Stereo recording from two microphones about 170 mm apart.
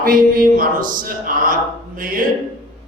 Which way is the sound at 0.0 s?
55° right (ahead or behind).